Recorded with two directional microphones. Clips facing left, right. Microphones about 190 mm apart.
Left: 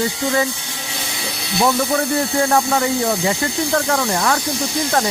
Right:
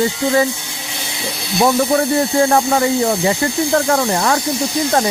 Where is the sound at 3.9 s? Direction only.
30° right (ahead or behind).